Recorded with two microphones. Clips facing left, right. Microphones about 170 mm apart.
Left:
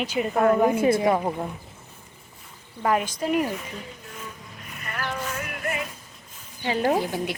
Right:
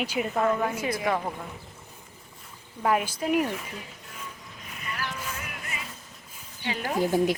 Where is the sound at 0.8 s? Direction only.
30° left (ahead or behind).